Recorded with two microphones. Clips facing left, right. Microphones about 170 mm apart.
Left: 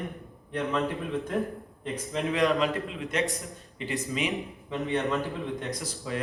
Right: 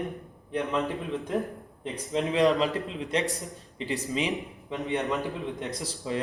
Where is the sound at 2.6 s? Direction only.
35° right (ahead or behind).